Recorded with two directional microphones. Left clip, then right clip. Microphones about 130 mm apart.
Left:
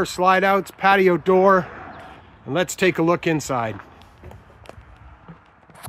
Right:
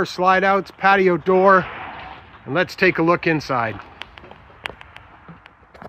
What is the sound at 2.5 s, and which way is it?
Speech, 25° left (ahead or behind).